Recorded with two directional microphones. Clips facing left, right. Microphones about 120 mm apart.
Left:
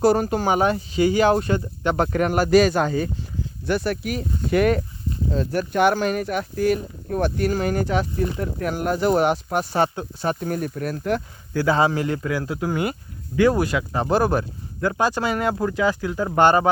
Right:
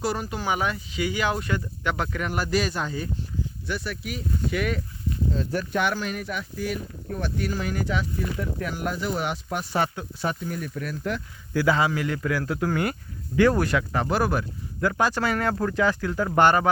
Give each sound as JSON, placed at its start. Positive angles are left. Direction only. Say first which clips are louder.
{"t": 0.0, "sound": "speech", "louder": "left 9 dB", "side_deg": 45}
{"t": 2.1, "sound": "speech", "louder": "left 12 dB", "side_deg": 50}
{"t": 3.7, "sound": "speech", "louder": "left 10 dB", "side_deg": 45}
{"t": 10.4, "sound": "speech", "louder": "left 6 dB", "side_deg": 50}
{"t": 11.5, "sound": "speech", "louder": "left 3 dB", "side_deg": 30}
{"t": 12.3, "sound": "speech", "louder": "left 1 dB", "side_deg": 15}